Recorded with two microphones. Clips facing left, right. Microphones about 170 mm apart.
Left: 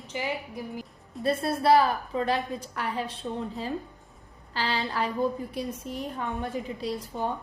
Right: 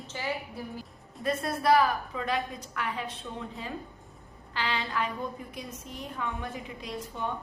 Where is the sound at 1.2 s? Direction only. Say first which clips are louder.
Left 3 dB; 30° left (ahead or behind).